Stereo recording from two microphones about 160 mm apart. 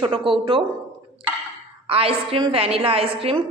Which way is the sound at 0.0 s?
30° right (ahead or behind).